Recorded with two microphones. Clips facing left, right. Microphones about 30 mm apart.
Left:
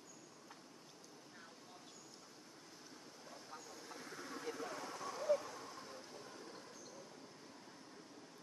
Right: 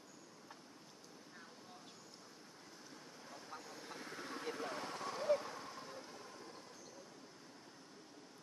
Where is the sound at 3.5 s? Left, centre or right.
Right.